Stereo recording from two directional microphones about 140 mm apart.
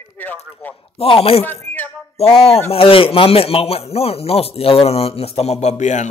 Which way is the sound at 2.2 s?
45° left (ahead or behind).